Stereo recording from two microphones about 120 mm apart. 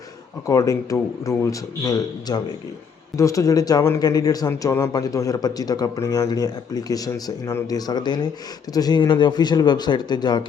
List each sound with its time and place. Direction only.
0.4 s a man's voice: 30° left (ahead or behind)